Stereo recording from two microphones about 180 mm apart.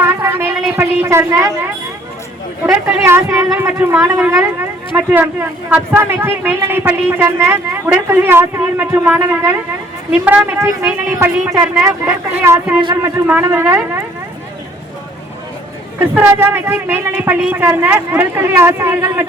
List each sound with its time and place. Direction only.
0.0 s a sound: 15° right (ahead or behind)
0.8 s a woman's voice: 15° right (ahead or behind)
2.8 s a man's voice: 15° right (ahead or behind)
12.8 s a man's voice: 25° right (ahead or behind)
13.1 s a man's voice: 15° right (ahead or behind)
16.0 s a man's voice: 10° right (ahead or behind)